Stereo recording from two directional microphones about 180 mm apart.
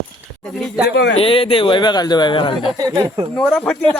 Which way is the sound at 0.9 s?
65° left (ahead or behind).